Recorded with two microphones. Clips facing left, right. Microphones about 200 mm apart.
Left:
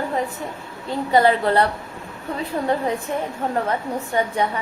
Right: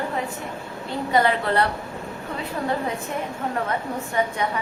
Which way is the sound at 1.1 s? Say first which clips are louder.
Left 4 dB; 35° left (ahead or behind).